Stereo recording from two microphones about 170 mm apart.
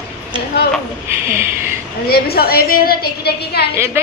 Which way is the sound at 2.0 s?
65° left (ahead or behind).